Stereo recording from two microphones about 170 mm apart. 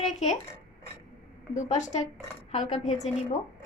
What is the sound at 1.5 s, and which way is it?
A woman's voice, 45° left (ahead or behind).